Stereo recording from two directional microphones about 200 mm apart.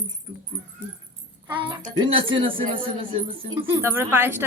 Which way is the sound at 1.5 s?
25° right (ahead or behind).